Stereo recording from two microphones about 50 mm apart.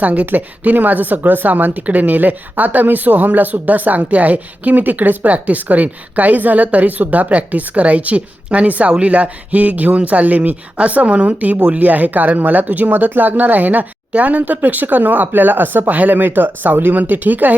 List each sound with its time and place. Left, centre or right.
0.0 s speech: right